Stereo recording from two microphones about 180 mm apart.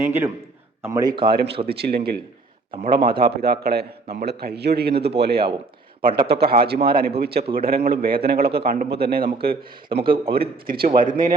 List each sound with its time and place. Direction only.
0.0 s a man's voice: 10° right (ahead or behind)
1.3 s a man's voice: 60° right (ahead or behind)
2.7 s a man's voice: 30° right (ahead or behind)
3.1 s a man's voice: 60° right (ahead or behind)